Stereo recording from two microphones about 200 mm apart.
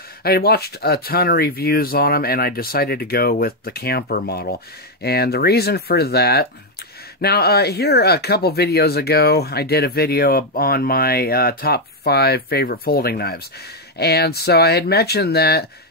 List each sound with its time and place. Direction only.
0.2 s speech: 50° left (ahead or behind)